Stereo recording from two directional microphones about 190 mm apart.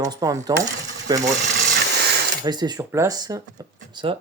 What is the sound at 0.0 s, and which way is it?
Speech, 20° right (ahead or behind).